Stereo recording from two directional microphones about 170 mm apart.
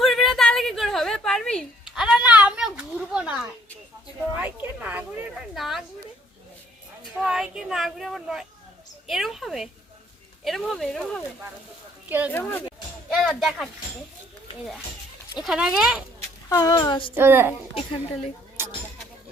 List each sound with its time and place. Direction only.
0.0 s a sound: centre (ahead or behind)
7.0 s a sound: 5° right (ahead or behind)
10.4 s speech: centre (ahead or behind)
12.0 s speech: 10° right (ahead or behind)
12.3 s speech: 10° left (ahead or behind)
13.1 s speech: centre (ahead or behind)
15.4 s speech: 5° right (ahead or behind)
16.5 s speech: 20° left (ahead or behind)
17.2 s a woman's voice: 10° right (ahead or behind)